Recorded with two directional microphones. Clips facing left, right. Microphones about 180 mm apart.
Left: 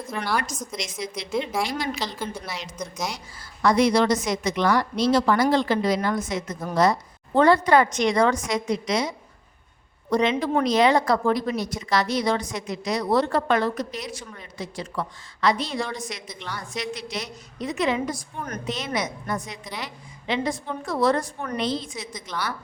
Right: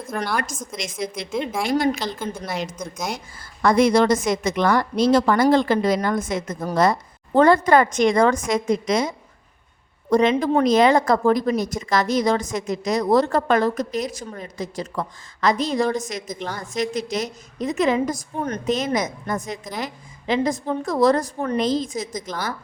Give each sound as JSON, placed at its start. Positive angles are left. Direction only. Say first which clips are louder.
{"t": 0.1, "sound": "a woman's voice", "louder": "right 2 dB", "side_deg": -50}
{"t": 1.3, "sound": "a woman's voice", "louder": "left 1 dB", "side_deg": 0}
{"t": 1.7, "sound": "a woman's voice", "louder": "right 8 dB", "side_deg": -50}
{"t": 21.6, "sound": "a woman's voice", "louder": "right 4 dB", "side_deg": -45}